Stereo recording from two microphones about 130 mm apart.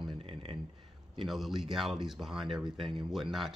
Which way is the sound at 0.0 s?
45° right (ahead or behind).